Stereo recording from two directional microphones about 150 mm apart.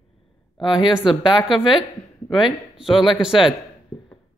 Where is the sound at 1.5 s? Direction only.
5° right (ahead or behind).